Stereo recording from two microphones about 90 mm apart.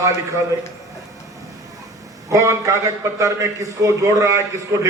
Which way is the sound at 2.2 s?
35° right (ahead or behind).